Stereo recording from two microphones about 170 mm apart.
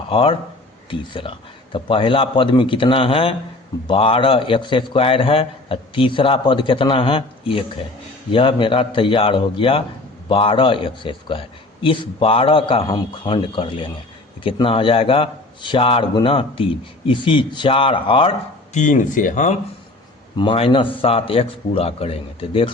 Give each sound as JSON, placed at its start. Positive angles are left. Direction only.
{"t": 0.1, "sound": "a man's voice", "side_deg": 30}
{"t": 18.8, "sound": "speech", "side_deg": 50}
{"t": 20.3, "sound": "a man's voice", "side_deg": 30}